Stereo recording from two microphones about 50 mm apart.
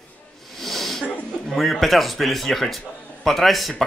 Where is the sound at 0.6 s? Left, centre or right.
Centre.